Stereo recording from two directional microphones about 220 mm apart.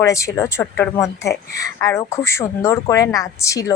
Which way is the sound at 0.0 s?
15° left (ahead or behind).